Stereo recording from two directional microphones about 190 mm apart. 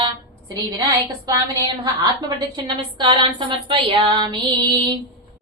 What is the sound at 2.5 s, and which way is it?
Speech, 25° right (ahead or behind).